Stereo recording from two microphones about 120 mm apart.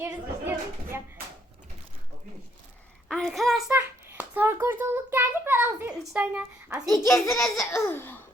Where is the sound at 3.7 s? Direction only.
15° right (ahead or behind).